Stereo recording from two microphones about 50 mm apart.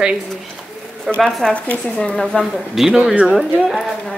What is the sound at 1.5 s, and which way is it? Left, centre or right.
Speech, left.